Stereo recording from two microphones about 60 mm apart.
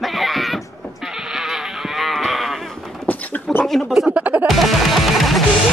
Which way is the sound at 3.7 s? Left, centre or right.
Centre.